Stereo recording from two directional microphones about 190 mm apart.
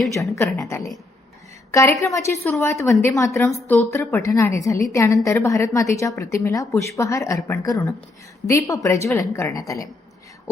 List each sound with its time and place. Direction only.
0.1 s a woman's voice: 15° left (ahead or behind)